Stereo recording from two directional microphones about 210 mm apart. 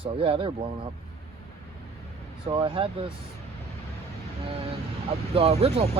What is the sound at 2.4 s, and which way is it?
Speech, 25° right (ahead or behind).